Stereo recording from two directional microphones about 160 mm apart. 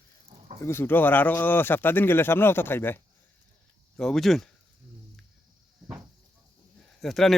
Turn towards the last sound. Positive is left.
turn(degrees=0)  # may be behind; listen again after turning